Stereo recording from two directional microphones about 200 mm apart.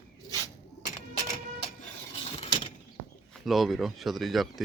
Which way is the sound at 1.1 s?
35° left (ahead or behind).